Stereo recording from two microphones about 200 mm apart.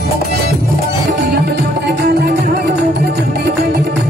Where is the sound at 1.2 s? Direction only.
55° right (ahead or behind).